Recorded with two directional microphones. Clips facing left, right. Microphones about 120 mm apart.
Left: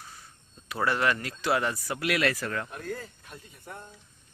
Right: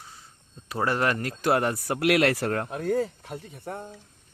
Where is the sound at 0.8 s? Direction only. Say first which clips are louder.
Right 1 dB; 40° right (ahead or behind); by 2.8 s 65° right (ahead or behind).